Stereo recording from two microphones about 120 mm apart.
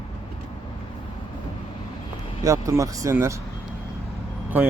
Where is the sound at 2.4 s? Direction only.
25° right (ahead or behind).